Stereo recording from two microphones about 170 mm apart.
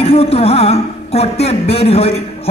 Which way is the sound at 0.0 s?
35° left (ahead or behind).